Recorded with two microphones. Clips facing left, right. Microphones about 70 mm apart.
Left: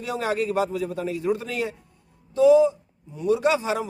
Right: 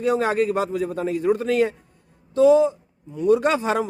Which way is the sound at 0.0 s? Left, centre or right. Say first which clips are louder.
Right 6 dB; right.